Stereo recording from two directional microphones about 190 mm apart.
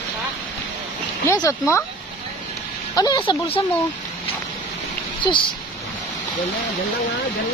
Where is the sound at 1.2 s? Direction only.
15° left (ahead or behind).